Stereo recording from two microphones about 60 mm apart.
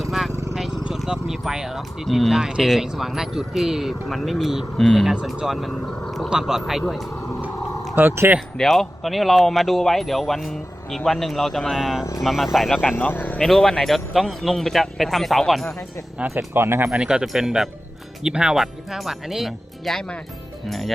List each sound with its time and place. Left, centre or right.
0.5 s speech: centre
8.0 s speech: right
8.5 s speech: centre
13.1 s speech: left
13.4 s speech: centre
16.6 s speech: right
16.9 s speech: centre
18.6 s speech: centre